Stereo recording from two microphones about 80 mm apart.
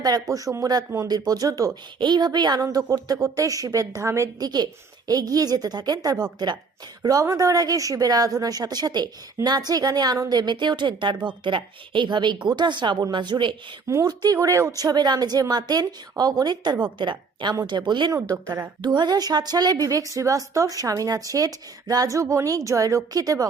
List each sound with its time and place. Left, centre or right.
0.0 s a woman's voice: right
2.0 s a woman's voice: right
2.6 s a woman's voice: right
4.4 s a woman's voice: right
14.0 s a woman's voice: right
14.3 s speech: right
14.8 s a woman's voice: right
16.8 s a woman's voice: right
18.1 s a woman's voice: right
18.8 s a woman's voice: right